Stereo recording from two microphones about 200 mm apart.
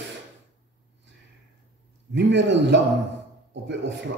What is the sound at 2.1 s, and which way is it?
A man's voice, 65° right (ahead or behind).